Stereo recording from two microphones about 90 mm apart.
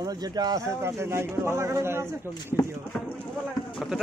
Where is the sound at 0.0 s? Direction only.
45° right (ahead or behind).